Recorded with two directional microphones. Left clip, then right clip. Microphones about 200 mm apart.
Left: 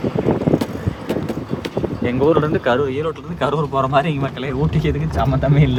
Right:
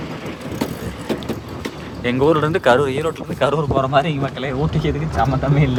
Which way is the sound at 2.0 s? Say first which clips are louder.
Right 1 dB; centre (ahead or behind).